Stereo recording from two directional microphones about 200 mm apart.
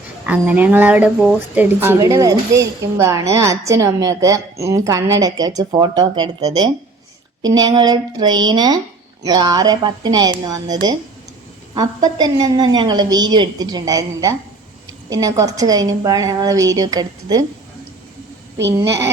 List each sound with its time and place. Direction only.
0.3 s a woman's voice: 10° right (ahead or behind)
12.0 s a woman's voice: 20° right (ahead or behind)
18.8 s speech: 15° right (ahead or behind)